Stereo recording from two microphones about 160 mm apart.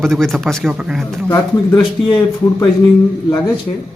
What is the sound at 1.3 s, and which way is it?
Speech, 20° left (ahead or behind).